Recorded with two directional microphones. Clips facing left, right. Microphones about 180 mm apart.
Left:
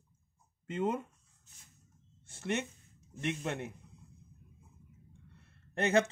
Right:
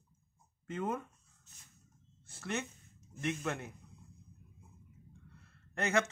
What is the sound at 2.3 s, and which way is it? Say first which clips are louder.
Speech: left 4 dB; 25° left (ahead or behind).